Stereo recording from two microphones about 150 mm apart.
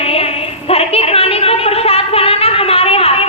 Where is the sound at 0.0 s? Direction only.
40° left (ahead or behind).